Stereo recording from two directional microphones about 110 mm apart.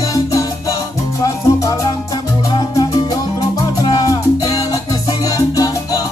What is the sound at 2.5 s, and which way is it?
Music, 35° left (ahead or behind).